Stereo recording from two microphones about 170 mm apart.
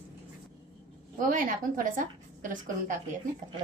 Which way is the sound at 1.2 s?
50° right (ahead or behind).